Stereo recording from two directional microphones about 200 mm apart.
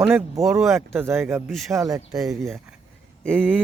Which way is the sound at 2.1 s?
Centre (ahead or behind).